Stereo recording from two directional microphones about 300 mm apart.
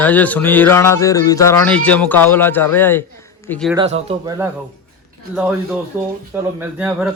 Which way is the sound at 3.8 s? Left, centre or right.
Right.